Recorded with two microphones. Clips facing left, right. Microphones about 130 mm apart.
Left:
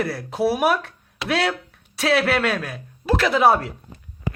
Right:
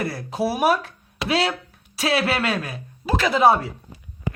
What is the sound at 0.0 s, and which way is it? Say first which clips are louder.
Speech: left 2 dB; centre (ahead or behind).